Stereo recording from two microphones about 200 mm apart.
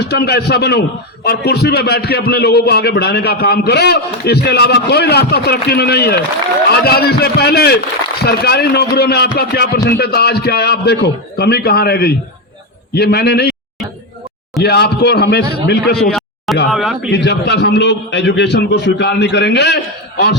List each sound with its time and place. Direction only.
0.0 s a man's voice: 55° left (ahead or behind)
14.6 s a man's voice: 55° left (ahead or behind)
16.0 s a sound: centre (ahead or behind)
16.7 s speech: centre (ahead or behind)
17.1 s a man's voice: 55° left (ahead or behind)